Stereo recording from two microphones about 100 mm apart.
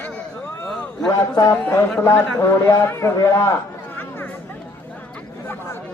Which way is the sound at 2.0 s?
25° left (ahead or behind).